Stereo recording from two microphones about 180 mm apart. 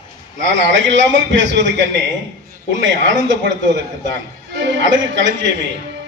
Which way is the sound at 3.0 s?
90° right.